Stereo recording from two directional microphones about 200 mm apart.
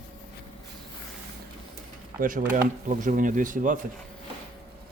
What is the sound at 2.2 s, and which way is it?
Speech, 45° right (ahead or behind).